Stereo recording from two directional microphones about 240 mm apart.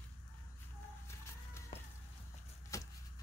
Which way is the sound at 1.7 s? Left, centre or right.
Left.